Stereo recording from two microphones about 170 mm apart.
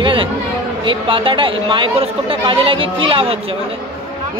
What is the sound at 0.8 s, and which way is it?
Speech, 30° right (ahead or behind).